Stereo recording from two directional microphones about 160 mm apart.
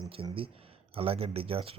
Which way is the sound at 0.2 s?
35° right (ahead or behind).